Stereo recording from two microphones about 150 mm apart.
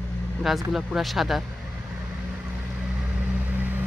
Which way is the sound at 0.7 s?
Centre (ahead or behind).